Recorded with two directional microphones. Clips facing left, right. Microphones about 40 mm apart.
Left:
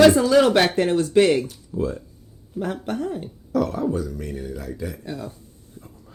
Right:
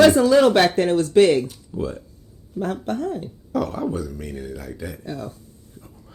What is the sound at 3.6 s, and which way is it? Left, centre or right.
Speech, centre.